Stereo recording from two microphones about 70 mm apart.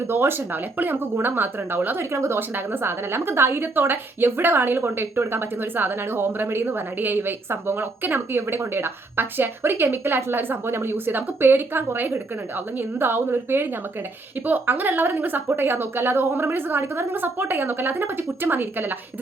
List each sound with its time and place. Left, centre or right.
0.1 s a woman's voice: right
2.1 s a woman's voice: right